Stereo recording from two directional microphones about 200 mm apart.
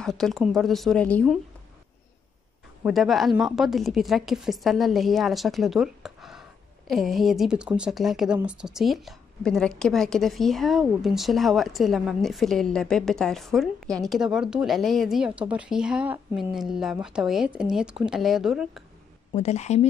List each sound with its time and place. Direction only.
0.0 s speech: centre (ahead or behind)
2.8 s speech: centre (ahead or behind)
19.3 s a woman's voice: 35° left (ahead or behind)